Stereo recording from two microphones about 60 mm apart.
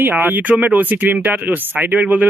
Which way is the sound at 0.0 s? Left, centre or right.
Right.